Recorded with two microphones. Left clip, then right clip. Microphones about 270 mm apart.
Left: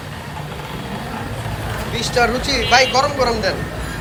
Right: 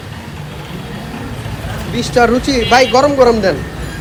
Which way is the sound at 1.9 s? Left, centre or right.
Centre.